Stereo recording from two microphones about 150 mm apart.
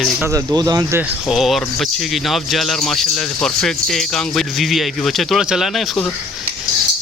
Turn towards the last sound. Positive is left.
turn(degrees=0)  # may be behind; listen again after turning